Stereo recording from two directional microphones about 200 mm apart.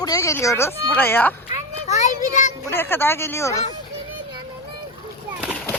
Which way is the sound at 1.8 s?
35° left (ahead or behind).